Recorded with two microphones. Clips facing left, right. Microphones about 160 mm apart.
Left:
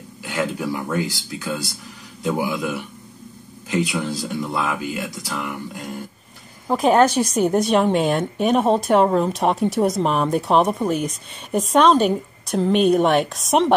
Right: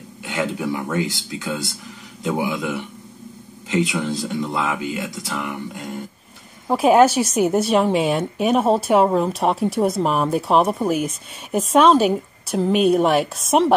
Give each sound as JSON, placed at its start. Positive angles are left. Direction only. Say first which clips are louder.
{"t": 0.2, "sound": "speech", "louder": "even", "side_deg": -25}
{"t": 6.7, "sound": "a woman's voice", "louder": "right 2 dB", "side_deg": -5}